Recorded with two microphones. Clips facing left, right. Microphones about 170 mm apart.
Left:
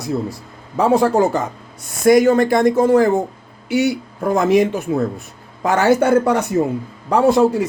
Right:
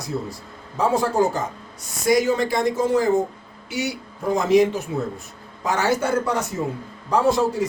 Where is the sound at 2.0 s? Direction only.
55° left (ahead or behind).